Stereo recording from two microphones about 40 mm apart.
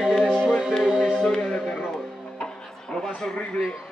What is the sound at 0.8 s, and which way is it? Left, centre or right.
Music, centre.